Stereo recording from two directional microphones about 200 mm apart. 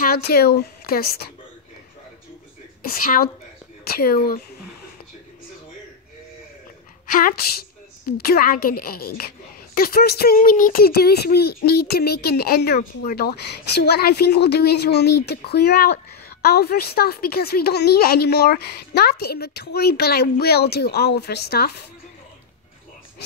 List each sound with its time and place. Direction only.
0.0 s speech: 50° left (ahead or behind)
2.9 s speech: 45° left (ahead or behind)
7.1 s speech: 45° left (ahead or behind)